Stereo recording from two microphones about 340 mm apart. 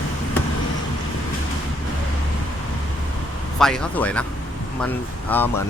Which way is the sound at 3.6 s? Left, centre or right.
Centre.